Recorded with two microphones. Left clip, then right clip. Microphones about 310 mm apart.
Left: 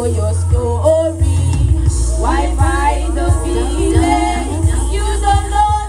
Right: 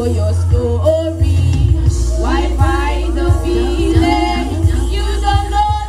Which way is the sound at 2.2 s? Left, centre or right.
Centre.